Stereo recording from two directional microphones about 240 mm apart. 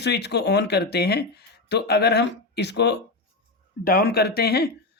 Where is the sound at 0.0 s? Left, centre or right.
Left.